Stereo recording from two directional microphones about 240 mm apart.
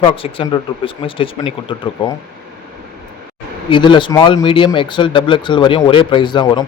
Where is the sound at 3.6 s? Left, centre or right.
Centre.